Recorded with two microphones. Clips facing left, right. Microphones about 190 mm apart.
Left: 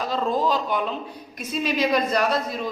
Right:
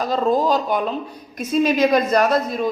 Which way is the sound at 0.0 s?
40° right (ahead or behind).